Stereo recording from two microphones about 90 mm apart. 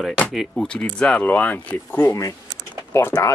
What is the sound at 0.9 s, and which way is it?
Speech, 10° left (ahead or behind).